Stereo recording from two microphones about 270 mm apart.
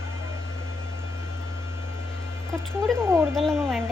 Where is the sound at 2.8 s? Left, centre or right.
Centre.